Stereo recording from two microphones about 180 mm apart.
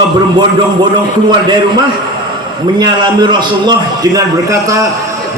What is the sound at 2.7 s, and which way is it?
A man's voice, 25° right (ahead or behind).